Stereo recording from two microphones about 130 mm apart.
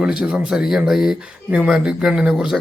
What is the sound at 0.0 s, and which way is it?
Speech, 5° right (ahead or behind).